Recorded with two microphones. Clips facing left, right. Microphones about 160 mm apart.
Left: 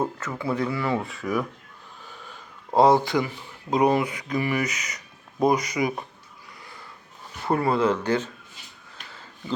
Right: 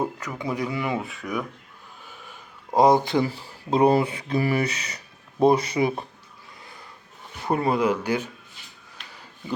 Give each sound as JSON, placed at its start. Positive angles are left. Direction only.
{"t": 0.0, "sound": "speech", "side_deg": -15}
{"t": 0.9, "sound": "speech", "side_deg": 0}
{"t": 2.7, "sound": "speech", "side_deg": -15}
{"t": 7.4, "sound": "speech", "side_deg": -20}